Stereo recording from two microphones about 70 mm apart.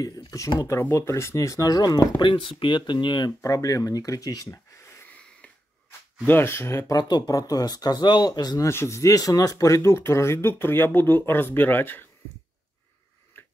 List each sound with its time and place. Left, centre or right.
0.0 s speech: left
0.7 s speech: left
0.9 s speech: left
2.9 s speech: left
3.3 s speech: left
4.5 s a sound: left
5.9 s speech: left
6.9 s speech: left
8.6 s speech: left